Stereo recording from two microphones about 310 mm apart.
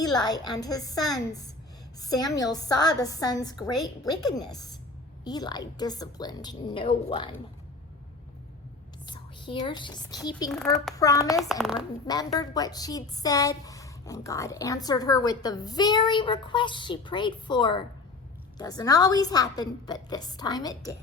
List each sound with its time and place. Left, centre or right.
0.0 s a woman's voice: centre
5.2 s a woman's voice: centre
9.0 s a woman's voice: centre
10.5 s a woman's voice: centre
11.3 s a child's voice: centre
12.0 s a woman's voice: centre